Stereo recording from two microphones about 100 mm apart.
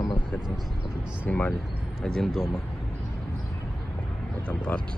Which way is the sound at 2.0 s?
5° left (ahead or behind).